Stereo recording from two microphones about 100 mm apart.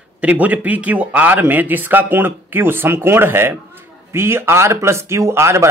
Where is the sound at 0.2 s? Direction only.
15° right (ahead or behind).